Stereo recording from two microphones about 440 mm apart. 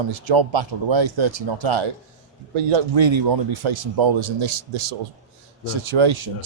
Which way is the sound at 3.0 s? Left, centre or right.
Right.